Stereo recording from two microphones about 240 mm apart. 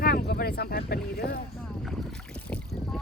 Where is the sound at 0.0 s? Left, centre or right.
Left.